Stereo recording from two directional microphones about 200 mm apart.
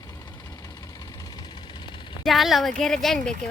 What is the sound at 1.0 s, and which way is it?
Vehicle, 20° left (ahead or behind).